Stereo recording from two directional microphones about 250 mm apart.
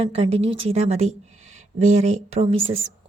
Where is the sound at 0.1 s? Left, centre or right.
Right.